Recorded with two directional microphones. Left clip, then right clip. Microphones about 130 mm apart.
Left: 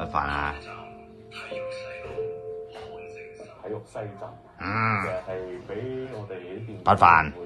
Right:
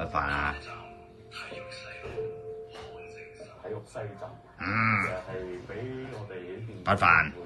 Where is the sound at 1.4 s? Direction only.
50° left (ahead or behind).